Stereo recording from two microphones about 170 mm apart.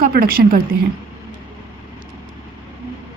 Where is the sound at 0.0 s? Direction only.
60° right (ahead or behind).